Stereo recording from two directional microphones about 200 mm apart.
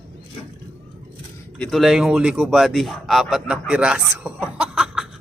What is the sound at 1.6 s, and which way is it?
Speech, centre (ahead or behind).